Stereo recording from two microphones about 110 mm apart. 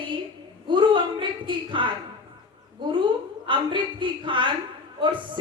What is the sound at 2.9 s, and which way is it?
A woman's voice, 50° right (ahead or behind).